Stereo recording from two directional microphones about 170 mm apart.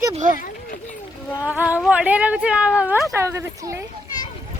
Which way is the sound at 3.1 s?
15° right (ahead or behind).